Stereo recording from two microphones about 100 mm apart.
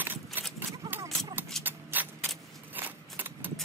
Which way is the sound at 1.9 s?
20° right (ahead or behind).